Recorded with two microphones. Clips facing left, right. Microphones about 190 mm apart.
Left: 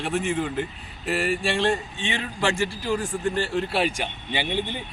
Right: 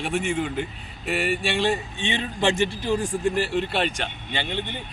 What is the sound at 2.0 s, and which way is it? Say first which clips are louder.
A man's voice: right 1 dB; 20° right (ahead or behind).